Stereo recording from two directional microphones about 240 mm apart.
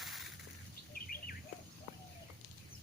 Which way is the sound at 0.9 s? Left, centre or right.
Left.